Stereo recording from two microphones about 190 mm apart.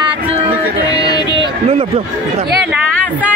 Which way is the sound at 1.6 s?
30° right (ahead or behind).